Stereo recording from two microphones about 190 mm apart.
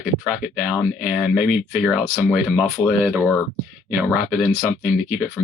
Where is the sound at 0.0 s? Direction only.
5° right (ahead or behind).